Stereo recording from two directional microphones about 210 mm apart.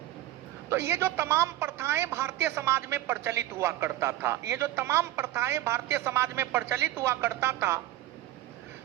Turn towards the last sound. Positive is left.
turn(degrees=-10)  # may be behind; listen again after turning